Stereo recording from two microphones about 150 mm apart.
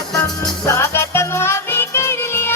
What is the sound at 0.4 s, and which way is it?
Music, 20° left (ahead or behind).